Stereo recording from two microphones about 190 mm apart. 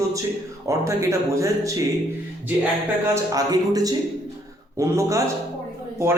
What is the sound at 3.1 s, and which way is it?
A man's voice, 20° right (ahead or behind).